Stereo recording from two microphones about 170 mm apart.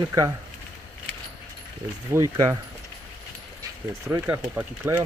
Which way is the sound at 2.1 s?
20° right (ahead or behind).